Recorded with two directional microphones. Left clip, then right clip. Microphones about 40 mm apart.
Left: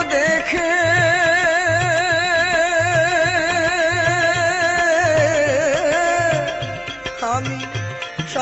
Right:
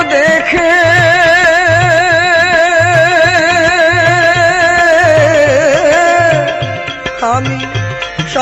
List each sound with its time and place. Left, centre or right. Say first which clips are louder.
0.0 s music: right 8 dB; left
0.8 s music: right 7 dB; centre
1.6 s music: right 9 dB; left
3.2 s music: right 9 dB; centre
3.8 s music: right 9 dB; left
5.4 s music: right 9 dB; centre
6.1 s music: right 9 dB; left